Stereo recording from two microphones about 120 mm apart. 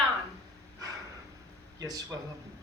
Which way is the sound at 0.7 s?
30° right (ahead or behind).